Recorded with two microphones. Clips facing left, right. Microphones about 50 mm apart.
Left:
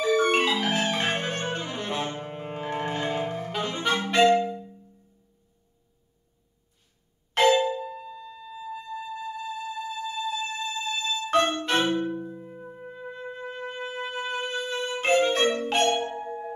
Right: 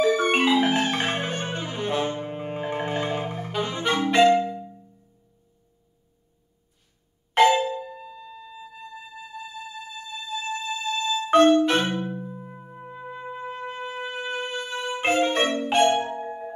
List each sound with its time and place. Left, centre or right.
0.0 s marimba: centre
0.7 s music: centre
3.8 s clarinet: centre
4.3 s music: centre
7.4 s music: centre
7.7 s music: centre